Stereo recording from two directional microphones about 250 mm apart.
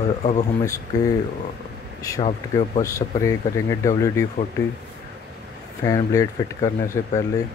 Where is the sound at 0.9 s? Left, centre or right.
Centre.